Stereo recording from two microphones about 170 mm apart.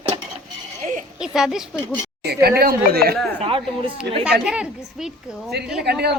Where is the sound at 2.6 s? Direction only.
65° right (ahead or behind).